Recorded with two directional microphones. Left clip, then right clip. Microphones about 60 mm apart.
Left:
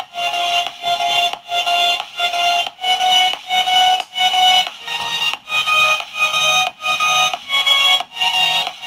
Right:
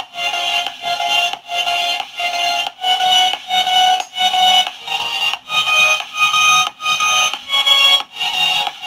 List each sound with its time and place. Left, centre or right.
0.2 s music: left